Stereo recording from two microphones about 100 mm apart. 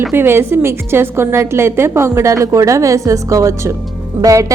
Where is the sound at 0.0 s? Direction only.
20° right (ahead or behind).